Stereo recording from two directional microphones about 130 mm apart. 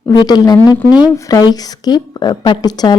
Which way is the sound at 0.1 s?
30° left (ahead or behind).